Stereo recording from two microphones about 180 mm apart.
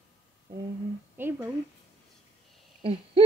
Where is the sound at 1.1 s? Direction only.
10° right (ahead or behind).